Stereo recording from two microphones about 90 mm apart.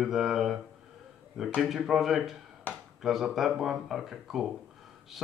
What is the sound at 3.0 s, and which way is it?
Speech, 5° right (ahead or behind).